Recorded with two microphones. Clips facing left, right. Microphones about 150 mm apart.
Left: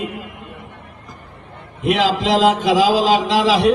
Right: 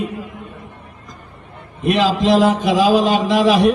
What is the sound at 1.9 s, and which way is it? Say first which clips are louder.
A man's voice: right 2 dB; 90° left.